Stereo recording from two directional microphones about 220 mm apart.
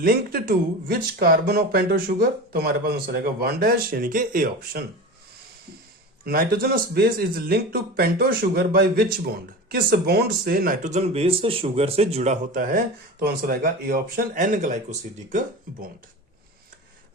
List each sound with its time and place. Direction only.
0.0 s speech: 40° right (ahead or behind)
6.2 s speech: 45° right (ahead or behind)